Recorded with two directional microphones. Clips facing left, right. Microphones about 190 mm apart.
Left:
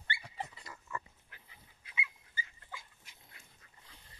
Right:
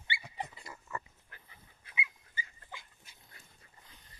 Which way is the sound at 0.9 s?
45° right (ahead or behind).